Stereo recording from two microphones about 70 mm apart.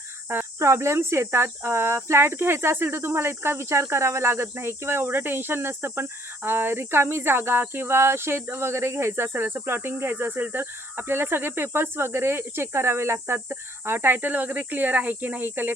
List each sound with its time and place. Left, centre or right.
0.6 s speech: right